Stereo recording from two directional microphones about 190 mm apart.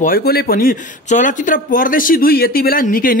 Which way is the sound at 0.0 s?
50° left (ahead or behind).